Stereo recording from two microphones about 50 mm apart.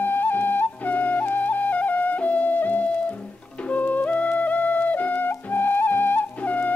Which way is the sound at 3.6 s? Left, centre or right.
Left.